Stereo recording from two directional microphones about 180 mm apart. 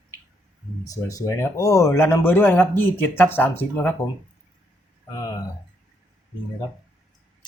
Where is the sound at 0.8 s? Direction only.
20° left (ahead or behind).